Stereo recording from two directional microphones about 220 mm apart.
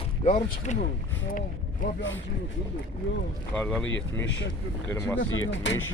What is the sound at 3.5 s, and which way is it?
Speech, 5° left (ahead or behind).